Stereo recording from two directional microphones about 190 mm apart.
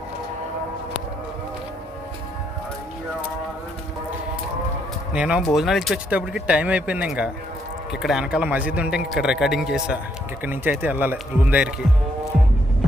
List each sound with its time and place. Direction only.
5.1 s speech: 5° right (ahead or behind)